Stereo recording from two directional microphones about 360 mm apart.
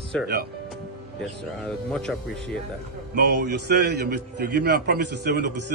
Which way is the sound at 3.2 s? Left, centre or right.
Right.